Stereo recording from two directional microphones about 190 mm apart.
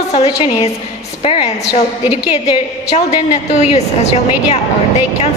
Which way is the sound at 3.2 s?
35° left (ahead or behind).